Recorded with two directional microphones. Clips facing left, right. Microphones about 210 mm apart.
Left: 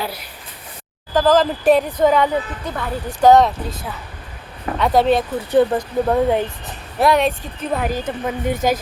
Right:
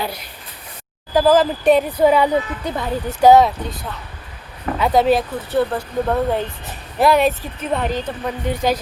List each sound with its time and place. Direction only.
1.1 s speech: 10° right (ahead or behind)
5.5 s speech: 15° left (ahead or behind)
7.0 s speech: centre (ahead or behind)
8.4 s a woman's voice: 50° left (ahead or behind)